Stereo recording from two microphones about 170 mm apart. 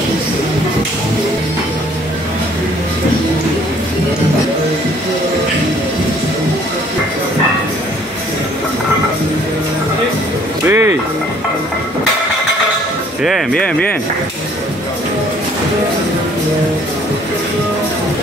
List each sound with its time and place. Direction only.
10.6 s music: 15° right (ahead or behind)
13.2 s speech: centre (ahead or behind)